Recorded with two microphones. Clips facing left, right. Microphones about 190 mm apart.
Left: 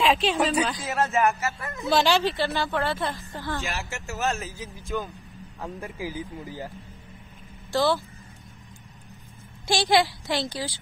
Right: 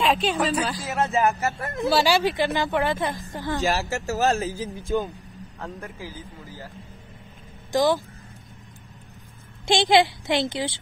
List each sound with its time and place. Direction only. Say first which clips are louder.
0.0 s speech: even; centre (ahead or behind)
1.4 s speech: right 5 dB; 55° right (ahead or behind)
1.9 s speech: right 1 dB; 10° right (ahead or behind)
3.6 s speech: right 9 dB; 35° right (ahead or behind)
5.6 s speech: left 2 dB; 15° left (ahead or behind)
7.7 s speech: right 2 dB; 15° right (ahead or behind)
9.7 s a child's voice: right 3 dB; 20° right (ahead or behind)